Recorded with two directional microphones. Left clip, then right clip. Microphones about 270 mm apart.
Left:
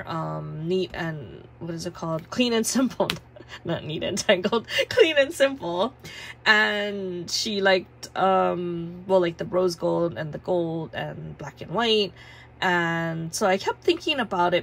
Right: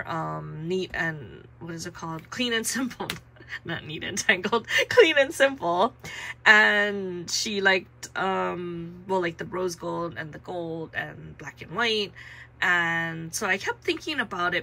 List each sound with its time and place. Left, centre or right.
0.0 s speech: centre